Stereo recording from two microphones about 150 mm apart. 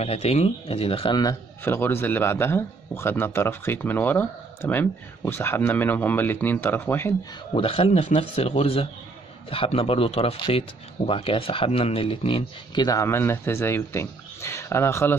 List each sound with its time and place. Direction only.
0.0 s speech: 45° left (ahead or behind)
1.6 s a man's voice: 15° left (ahead or behind)
7.5 s speech: 40° left (ahead or behind)
12.8 s a man's voice: 20° left (ahead or behind)